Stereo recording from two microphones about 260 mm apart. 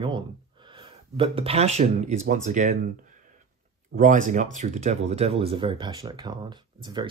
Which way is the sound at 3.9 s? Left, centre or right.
Right.